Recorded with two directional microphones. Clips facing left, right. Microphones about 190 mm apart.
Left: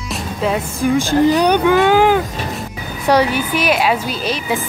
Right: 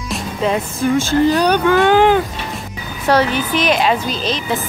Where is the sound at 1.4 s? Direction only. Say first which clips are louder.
Left 1 dB; 15° left (ahead or behind).